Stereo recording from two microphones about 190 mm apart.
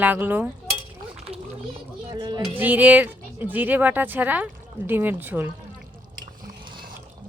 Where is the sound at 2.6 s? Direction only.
10° right (ahead or behind).